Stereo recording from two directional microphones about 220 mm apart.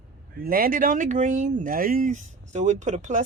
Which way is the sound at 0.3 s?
40° right (ahead or behind).